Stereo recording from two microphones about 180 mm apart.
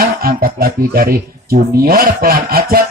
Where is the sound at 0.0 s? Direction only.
55° right (ahead or behind).